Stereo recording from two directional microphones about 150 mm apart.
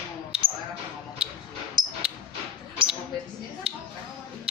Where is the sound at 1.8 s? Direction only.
30° right (ahead or behind).